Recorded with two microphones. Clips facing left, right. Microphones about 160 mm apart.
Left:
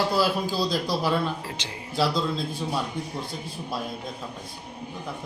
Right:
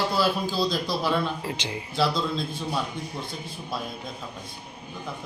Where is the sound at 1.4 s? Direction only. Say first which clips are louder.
Right 5 dB; 20° right (ahead or behind).